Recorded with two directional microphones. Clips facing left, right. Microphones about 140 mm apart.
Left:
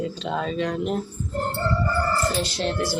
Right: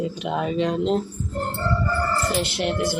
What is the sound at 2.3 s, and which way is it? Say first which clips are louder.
Speech: right 2 dB; 15° right (ahead or behind).